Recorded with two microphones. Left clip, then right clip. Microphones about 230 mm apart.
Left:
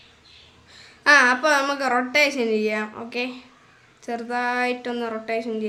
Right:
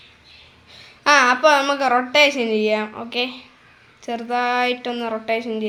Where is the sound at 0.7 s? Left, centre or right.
Centre.